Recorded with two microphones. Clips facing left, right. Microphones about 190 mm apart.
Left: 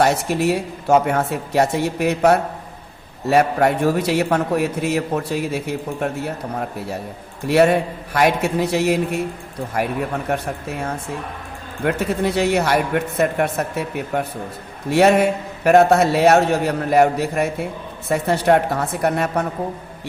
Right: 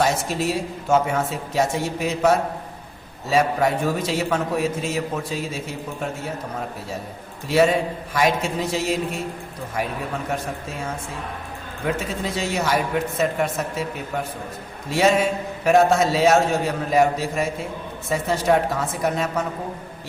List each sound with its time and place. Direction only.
0.0 s a man's voice: 65° left (ahead or behind)
7.4 s a man's voice: 60° left (ahead or behind)